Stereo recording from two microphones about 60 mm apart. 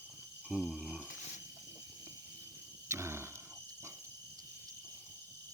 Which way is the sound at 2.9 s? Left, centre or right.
Right.